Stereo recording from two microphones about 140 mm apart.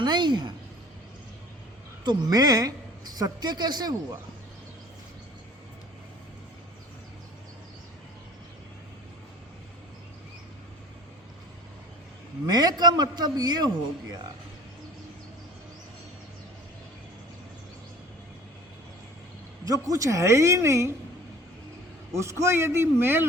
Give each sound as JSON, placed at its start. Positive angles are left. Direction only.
{"t": 0.0, "sound": "a man's voice", "side_deg": -30}
{"t": 2.0, "sound": "speech", "side_deg": -30}
{"t": 12.5, "sound": "a man's voice", "side_deg": -30}
{"t": 19.6, "sound": "speech", "side_deg": -25}
{"t": 22.1, "sound": "a man's voice", "side_deg": -20}